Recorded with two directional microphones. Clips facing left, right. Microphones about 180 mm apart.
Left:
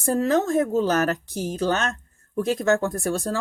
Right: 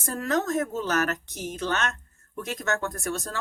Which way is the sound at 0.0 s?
30° left (ahead or behind).